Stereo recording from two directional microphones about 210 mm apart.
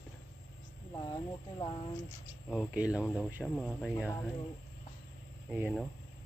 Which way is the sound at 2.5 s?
5° right (ahead or behind).